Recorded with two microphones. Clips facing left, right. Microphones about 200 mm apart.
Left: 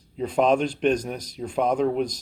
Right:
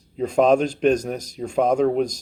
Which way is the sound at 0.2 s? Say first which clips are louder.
Right 4 dB; 45° right (ahead or behind).